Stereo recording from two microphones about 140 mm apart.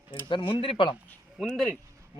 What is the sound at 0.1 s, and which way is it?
Speech, 35° left (ahead or behind).